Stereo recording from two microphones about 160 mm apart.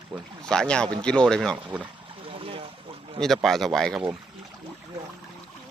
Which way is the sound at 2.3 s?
35° right (ahead or behind).